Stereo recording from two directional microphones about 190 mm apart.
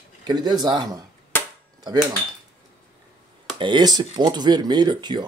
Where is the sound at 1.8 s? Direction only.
20° right (ahead or behind).